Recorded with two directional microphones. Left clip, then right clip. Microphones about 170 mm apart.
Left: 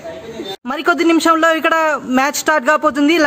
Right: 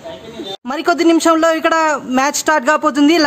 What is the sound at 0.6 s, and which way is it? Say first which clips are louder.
A man's voice: right 1 dB; centre (ahead or behind).